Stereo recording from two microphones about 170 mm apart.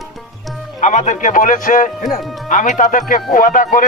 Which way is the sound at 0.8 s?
45° left (ahead or behind).